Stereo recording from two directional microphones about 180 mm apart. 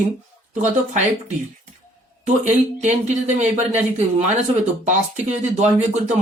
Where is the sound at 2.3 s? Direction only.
40° right (ahead or behind).